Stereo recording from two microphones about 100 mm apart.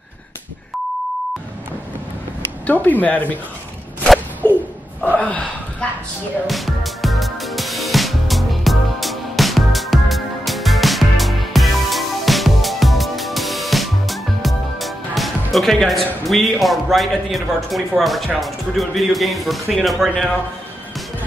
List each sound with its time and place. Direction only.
2.6 s speech: 15° left (ahead or behind)
5.1 s gasp: 10° left (ahead or behind)
6.4 s music: centre (ahead or behind)